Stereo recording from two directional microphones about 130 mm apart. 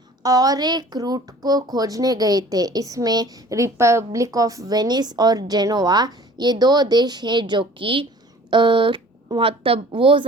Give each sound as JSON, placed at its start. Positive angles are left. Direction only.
{"t": 0.2, "sound": "speech", "side_deg": -30}